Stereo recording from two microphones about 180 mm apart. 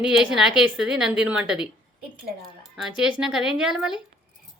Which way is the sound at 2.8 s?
5° right (ahead or behind).